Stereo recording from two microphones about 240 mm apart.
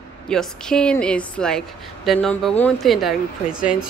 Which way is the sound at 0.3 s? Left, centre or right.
Centre.